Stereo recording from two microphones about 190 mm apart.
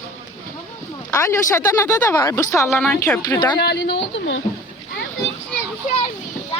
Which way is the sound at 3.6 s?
60° left (ahead or behind).